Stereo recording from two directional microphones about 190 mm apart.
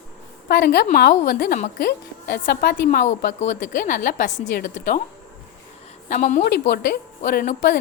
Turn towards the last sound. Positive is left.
turn(degrees=50)  # may be behind; listen again after turning